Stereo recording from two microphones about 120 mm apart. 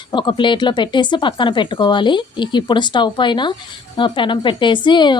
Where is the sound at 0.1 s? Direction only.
40° left (ahead or behind).